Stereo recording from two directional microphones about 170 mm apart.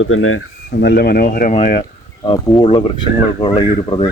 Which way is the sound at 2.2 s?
25° left (ahead or behind).